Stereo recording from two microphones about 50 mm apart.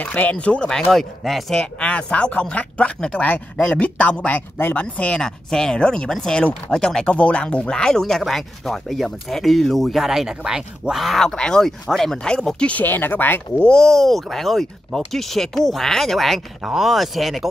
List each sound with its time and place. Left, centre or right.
0.0 s speech: left; by 0.9 s centre
0.9 s speech: centre
1.8 s speech: left
5.2 s speech: centre
11.1 s speech: centre
12.3 s speech: centre
12.8 s speech: left
13.6 s speech: centre